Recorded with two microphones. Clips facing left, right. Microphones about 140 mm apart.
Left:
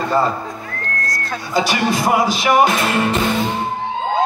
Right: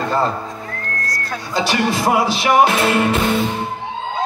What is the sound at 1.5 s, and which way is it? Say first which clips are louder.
Music: left 1 dB; 5° left (ahead or behind).